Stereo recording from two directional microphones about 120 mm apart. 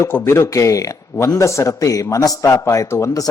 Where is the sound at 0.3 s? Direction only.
20° left (ahead or behind).